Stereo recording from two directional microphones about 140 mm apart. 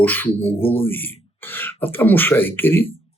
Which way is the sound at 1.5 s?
15° left (ahead or behind).